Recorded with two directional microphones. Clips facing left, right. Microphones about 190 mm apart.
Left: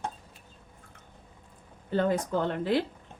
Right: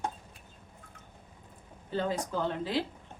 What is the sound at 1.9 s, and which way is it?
Speech, 55° left (ahead or behind).